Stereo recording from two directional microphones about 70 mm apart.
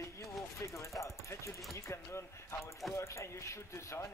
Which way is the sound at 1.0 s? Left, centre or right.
Left.